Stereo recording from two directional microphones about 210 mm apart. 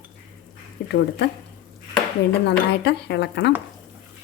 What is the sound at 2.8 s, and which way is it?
Speech, 55° left (ahead or behind).